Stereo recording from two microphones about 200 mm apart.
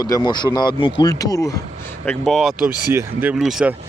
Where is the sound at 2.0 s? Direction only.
Centre (ahead or behind).